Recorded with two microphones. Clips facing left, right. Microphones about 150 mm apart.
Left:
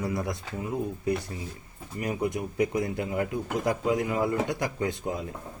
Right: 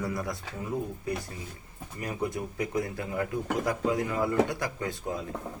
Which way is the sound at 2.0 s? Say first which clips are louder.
Left 3 dB; 15° left (ahead or behind).